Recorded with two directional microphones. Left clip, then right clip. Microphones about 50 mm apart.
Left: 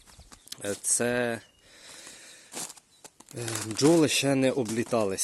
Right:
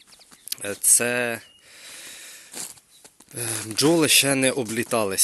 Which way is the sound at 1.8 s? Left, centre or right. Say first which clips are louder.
Right 6 dB; left.